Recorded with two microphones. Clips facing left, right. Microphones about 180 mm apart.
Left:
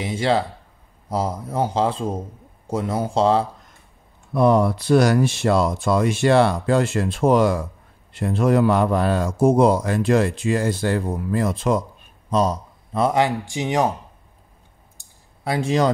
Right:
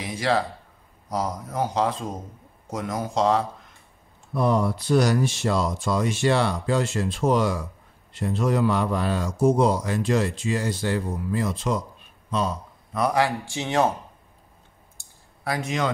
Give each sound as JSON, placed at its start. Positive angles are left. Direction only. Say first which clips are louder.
{"t": 0.0, "sound": "speech", "louder": "left 3 dB", "side_deg": 25}
{"t": 4.3, "sound": "a man's voice", "louder": "left 6 dB", "side_deg": 65}
{"t": 12.3, "sound": "speech", "louder": "left 6 dB", "side_deg": 40}
{"t": 12.9, "sound": "speech", "louder": "left 3 dB", "side_deg": 25}
{"t": 15.0, "sound": "a sound", "louder": "even", "side_deg": 25}